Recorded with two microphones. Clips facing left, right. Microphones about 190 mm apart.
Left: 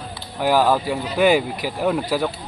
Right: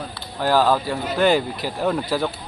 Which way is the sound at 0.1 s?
15° left (ahead or behind).